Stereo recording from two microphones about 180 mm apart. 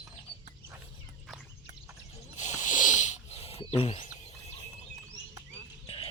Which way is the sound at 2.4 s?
40° left (ahead or behind).